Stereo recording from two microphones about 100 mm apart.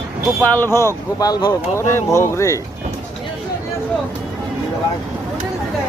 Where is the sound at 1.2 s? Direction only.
40° left (ahead or behind).